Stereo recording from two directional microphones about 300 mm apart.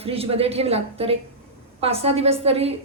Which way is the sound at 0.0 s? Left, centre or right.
Centre.